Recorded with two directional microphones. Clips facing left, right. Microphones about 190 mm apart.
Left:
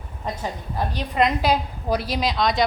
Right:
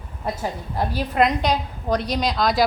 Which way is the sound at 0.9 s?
Centre (ahead or behind).